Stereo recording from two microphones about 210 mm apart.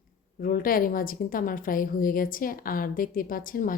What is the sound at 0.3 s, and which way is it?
A woman's voice, 40° left (ahead or behind).